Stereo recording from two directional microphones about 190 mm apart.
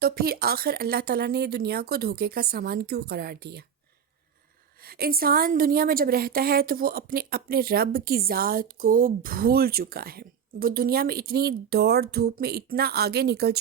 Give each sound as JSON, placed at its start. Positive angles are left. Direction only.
{"t": 0.0, "sound": "speech", "side_deg": -55}
{"t": 4.8, "sound": "a woman's voice", "side_deg": -50}